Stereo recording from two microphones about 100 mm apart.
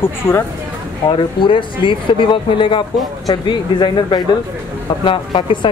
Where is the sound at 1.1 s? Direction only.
55° left (ahead or behind).